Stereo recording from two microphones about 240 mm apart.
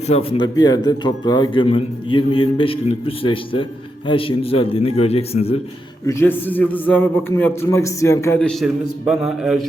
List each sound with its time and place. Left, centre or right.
0.1 s a man's voice: left
6.1 s a man's voice: centre